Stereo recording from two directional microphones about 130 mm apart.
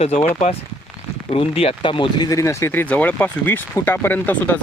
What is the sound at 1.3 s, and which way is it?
Speech, 45° left (ahead or behind).